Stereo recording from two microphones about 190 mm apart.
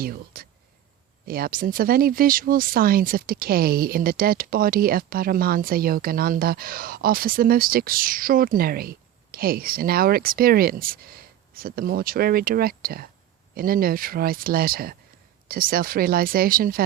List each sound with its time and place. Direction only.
0.0 s speech: 50° right (ahead or behind)